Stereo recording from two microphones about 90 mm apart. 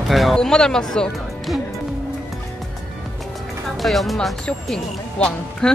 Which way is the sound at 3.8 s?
Centre (ahead or behind).